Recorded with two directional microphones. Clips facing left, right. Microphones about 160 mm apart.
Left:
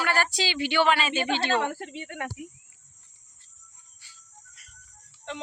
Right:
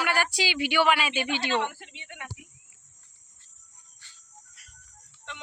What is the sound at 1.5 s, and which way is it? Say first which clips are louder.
Speech: left 2 dB; 45° left (ahead or behind).